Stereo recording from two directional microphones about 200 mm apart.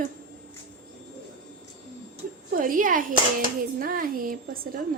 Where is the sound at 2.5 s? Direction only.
45° right (ahead or behind).